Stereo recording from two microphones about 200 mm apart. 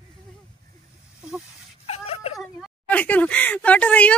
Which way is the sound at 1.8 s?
30° left (ahead or behind).